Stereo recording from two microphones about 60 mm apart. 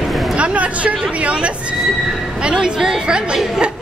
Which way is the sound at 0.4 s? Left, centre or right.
Right.